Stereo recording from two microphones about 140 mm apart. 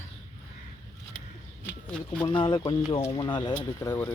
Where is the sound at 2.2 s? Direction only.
35° left (ahead or behind).